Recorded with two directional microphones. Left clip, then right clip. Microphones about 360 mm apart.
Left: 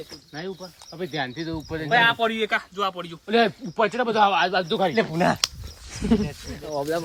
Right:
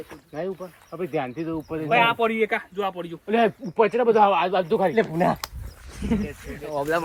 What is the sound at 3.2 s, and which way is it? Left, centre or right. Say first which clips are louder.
Speech: left 1 dB; centre.